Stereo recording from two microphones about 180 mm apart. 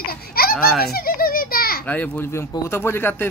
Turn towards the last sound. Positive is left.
turn(degrees=10)  # may be behind; listen again after turning